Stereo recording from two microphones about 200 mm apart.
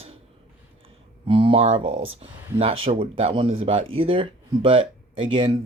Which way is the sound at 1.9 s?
80° right.